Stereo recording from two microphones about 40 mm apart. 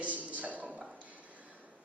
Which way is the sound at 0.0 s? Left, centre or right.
Right.